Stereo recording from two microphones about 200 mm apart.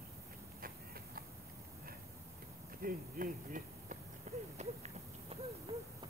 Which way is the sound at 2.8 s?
45° right (ahead or behind).